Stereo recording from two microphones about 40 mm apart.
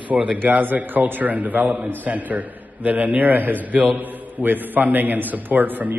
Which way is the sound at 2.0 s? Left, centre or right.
Right.